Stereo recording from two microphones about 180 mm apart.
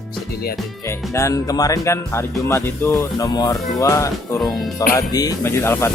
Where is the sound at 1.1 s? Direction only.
15° left (ahead or behind).